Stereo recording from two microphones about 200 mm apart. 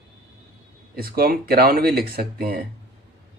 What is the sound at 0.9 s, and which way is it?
Speech, 50° right (ahead or behind).